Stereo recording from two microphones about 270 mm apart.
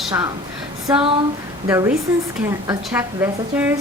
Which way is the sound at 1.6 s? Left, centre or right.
Centre.